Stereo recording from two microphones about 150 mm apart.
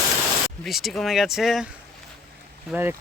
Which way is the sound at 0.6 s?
Centre (ahead or behind).